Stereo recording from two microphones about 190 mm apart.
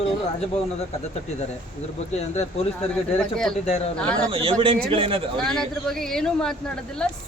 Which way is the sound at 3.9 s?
5° left (ahead or behind).